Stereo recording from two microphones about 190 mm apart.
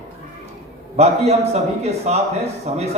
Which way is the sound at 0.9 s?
35° right (ahead or behind).